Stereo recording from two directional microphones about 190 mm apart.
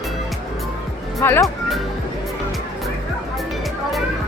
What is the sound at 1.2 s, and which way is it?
Speech, 15° left (ahead or behind).